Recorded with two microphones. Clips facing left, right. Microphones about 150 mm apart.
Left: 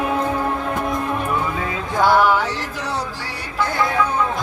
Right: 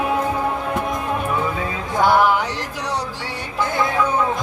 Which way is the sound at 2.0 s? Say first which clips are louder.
Even; 15° right (ahead or behind).